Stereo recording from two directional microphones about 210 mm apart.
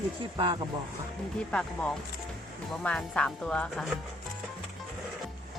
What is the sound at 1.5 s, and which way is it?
Speech, 5° left (ahead or behind).